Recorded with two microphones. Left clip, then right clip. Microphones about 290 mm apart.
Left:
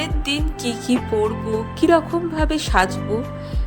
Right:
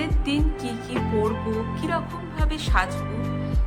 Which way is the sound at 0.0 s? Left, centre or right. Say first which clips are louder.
Left 3 dB; left.